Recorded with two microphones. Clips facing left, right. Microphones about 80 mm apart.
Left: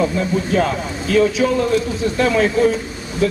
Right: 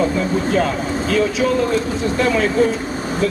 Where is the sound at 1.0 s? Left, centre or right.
Centre.